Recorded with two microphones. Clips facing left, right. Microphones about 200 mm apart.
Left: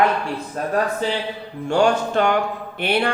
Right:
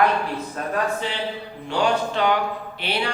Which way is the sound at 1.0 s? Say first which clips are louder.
Left 4 dB; 40° left (ahead or behind).